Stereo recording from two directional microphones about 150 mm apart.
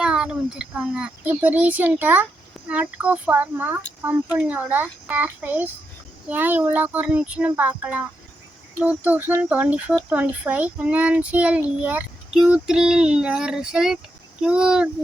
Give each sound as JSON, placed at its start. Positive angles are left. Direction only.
{"t": 0.0, "sound": "speech", "side_deg": -5}